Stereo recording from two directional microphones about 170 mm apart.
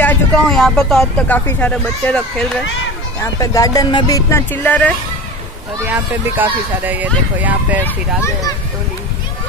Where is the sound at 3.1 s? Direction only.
20° left (ahead or behind).